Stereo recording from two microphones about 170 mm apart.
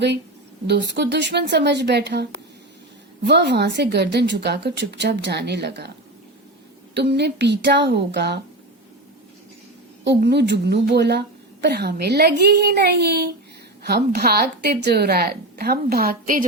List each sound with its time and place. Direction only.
0.7 s a woman's voice: 80° right
3.2 s a woman's voice: 90° right
6.9 s a woman's voice: 80° right
10.0 s speech: 90° right; by 16.5 s 55° right (ahead or behind)